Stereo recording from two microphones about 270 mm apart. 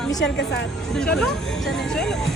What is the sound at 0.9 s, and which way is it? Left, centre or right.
Speech, centre.